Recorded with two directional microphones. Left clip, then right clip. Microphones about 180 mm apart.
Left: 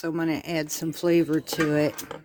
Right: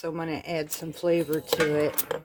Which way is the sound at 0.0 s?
65° left (ahead or behind).